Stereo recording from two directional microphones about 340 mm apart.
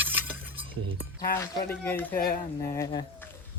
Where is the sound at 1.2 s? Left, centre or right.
Centre.